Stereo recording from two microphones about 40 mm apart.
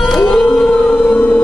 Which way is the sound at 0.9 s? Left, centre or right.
Left.